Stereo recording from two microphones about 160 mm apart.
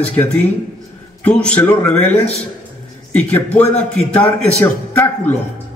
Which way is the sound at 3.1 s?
10° left (ahead or behind).